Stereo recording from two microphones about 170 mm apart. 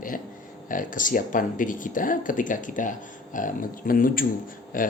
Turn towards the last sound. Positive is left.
turn(degrees=55)  # may be behind; listen again after turning